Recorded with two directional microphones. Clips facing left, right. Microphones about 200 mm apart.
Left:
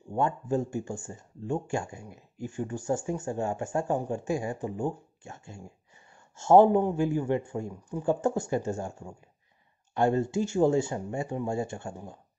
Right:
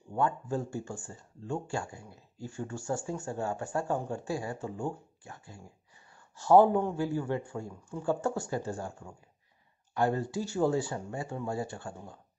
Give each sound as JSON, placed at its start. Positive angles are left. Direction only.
{"t": 0.1, "sound": "speech", "side_deg": 20}